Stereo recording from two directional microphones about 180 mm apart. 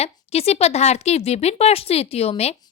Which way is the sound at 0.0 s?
35° left (ahead or behind).